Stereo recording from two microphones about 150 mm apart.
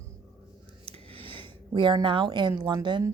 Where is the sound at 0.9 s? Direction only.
40° right (ahead or behind).